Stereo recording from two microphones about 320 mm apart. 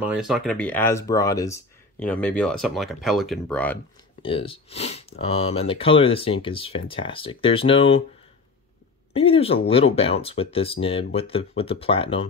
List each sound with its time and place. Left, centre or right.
0.0 s speech: centre
4.2 s speech: centre
9.1 s speech: centre